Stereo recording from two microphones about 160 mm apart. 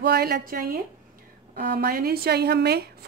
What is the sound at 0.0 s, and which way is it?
A woman's voice, 80° right.